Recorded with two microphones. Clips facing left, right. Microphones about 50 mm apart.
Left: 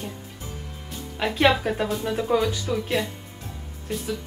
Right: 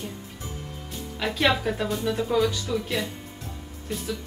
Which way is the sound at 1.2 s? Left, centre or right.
Left.